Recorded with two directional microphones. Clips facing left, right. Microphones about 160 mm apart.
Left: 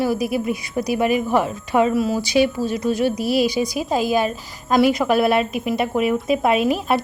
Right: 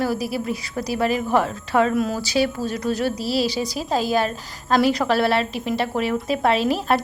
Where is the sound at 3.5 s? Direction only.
10° left (ahead or behind).